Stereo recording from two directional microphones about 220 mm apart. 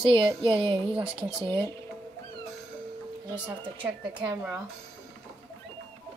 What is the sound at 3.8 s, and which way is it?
Speech, 20° right (ahead or behind).